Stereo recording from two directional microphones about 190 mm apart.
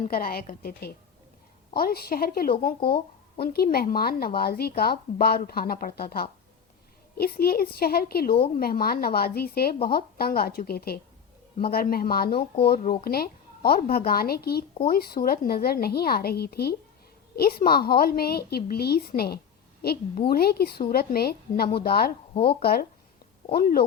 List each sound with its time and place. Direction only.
0.0 s a woman's voice: 50° left (ahead or behind)